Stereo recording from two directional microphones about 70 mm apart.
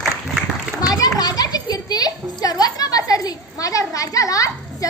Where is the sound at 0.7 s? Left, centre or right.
Left.